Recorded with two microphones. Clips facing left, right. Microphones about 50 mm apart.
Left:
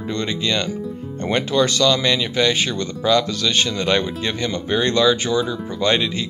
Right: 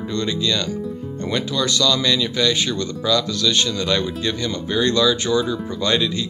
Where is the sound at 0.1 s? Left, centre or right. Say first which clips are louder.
Even; left.